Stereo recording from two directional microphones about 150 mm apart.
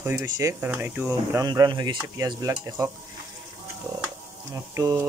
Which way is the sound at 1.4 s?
25° right (ahead or behind).